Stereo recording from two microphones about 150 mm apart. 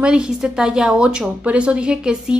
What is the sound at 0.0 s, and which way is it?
A woman's voice, 5° right (ahead or behind).